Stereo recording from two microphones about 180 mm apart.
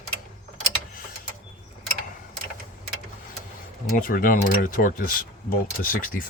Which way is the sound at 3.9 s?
50° left (ahead or behind).